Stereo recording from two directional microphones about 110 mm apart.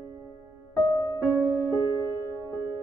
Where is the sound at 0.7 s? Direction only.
40° left (ahead or behind).